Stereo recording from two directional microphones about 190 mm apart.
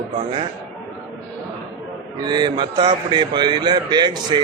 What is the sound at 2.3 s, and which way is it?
A man's voice, 20° right (ahead or behind).